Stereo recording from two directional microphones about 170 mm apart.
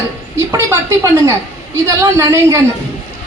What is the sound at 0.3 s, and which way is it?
A woman's voice, 15° right (ahead or behind).